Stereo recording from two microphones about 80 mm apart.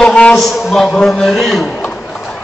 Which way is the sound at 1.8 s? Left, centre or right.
Centre.